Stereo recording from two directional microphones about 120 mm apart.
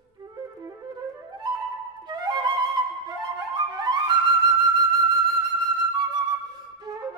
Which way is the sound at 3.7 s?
35° right (ahead or behind).